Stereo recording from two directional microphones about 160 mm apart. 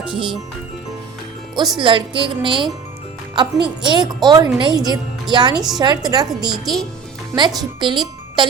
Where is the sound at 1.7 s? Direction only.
30° right (ahead or behind).